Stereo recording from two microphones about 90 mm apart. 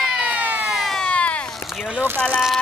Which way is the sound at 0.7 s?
Centre (ahead or behind).